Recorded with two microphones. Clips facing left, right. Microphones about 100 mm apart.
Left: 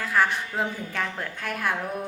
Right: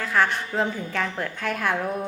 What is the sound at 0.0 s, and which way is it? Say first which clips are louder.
Speech: right 1 dB; 10° left (ahead or behind).